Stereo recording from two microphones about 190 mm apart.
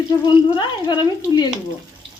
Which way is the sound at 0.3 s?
25° left (ahead or behind).